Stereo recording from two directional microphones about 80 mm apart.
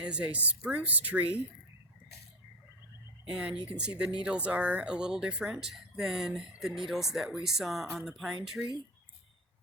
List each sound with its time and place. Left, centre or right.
0.0 s speech: centre
3.2 s speech: centre